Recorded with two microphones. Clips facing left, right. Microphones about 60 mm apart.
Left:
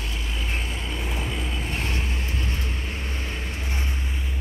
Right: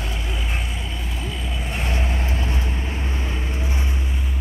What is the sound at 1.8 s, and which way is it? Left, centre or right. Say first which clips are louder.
Vehicle: right 3 dB; right.